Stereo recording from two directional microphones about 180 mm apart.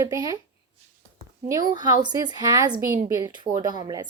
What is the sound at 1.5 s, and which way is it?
Speech, 20° right (ahead or behind).